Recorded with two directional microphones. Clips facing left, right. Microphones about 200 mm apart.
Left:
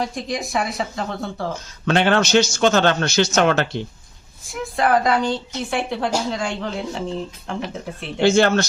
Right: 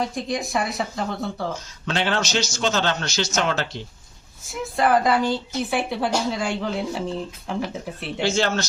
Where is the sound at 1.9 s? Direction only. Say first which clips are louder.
Left 7 dB; 55° left (ahead or behind).